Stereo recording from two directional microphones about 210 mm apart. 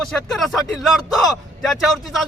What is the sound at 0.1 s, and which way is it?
A man's voice, centre (ahead or behind).